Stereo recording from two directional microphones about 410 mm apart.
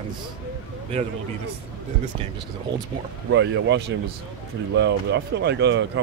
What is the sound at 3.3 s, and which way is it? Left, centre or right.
Speech, right.